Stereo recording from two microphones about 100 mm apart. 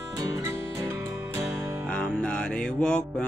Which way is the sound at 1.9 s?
10° left (ahead or behind).